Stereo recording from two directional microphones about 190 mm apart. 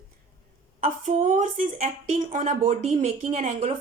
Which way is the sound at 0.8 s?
40° right (ahead or behind).